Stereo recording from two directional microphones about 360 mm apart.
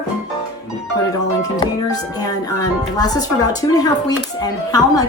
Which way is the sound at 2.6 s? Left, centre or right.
Centre.